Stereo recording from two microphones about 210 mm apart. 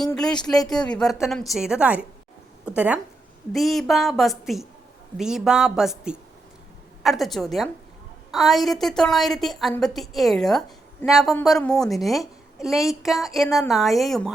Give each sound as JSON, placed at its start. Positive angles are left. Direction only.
{"t": 0.7, "sound": "a woman's voice", "side_deg": 5}